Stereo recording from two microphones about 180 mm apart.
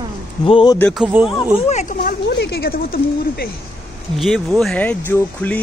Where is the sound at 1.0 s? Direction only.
5° right (ahead or behind).